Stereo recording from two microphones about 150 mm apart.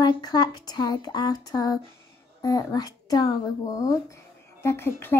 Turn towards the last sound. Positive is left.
turn(degrees=15)  # may be behind; listen again after turning